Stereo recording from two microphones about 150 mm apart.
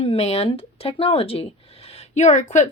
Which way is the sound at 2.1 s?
55° left (ahead or behind).